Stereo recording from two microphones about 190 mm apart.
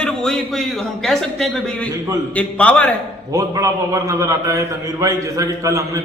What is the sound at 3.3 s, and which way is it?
A man's voice, 15° right (ahead or behind).